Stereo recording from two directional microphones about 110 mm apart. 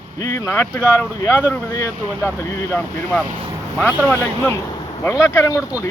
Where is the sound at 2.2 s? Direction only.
15° left (ahead or behind).